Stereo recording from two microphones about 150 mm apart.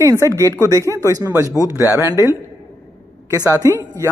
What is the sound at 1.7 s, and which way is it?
Speech, 20° left (ahead or behind).